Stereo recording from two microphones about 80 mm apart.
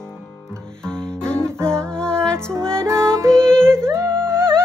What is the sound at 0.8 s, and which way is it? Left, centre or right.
Music, centre.